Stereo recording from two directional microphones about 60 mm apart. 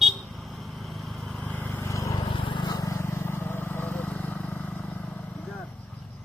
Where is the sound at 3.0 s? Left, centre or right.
Left.